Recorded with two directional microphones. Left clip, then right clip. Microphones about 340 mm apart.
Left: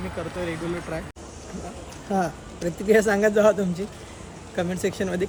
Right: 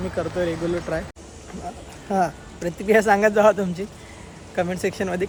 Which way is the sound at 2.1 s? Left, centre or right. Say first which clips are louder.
Right 4 dB; centre.